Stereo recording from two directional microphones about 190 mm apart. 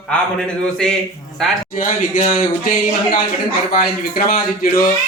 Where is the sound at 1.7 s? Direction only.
45° left (ahead or behind).